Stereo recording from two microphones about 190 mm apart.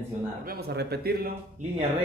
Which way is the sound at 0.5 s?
55° right (ahead or behind).